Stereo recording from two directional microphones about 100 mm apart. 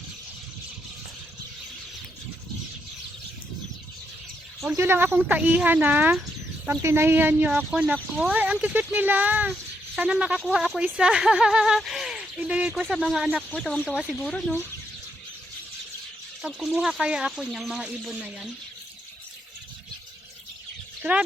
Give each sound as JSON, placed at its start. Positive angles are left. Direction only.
{"t": 4.8, "sound": "speech", "side_deg": -20}
{"t": 6.7, "sound": "a woman's voice", "side_deg": -25}
{"t": 7.5, "sound": "speech", "side_deg": -10}
{"t": 12.8, "sound": "speech", "side_deg": 5}
{"t": 16.4, "sound": "speech", "side_deg": 0}
{"t": 21.0, "sound": "speech", "side_deg": -10}